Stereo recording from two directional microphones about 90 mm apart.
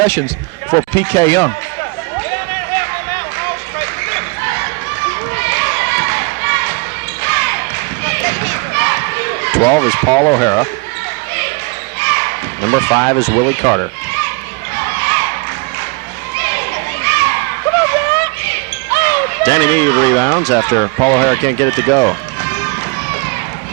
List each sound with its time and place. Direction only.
0.0 s speech: 30° left (ahead or behind)
2.3 s a sound: 35° left (ahead or behind)
5.4 s basketball bounce: 35° left (ahead or behind)
11.9 s basketball bounce: 35° left (ahead or behind)
14.8 s crowd: 30° left (ahead or behind)
16.4 s a sound: 35° left (ahead or behind)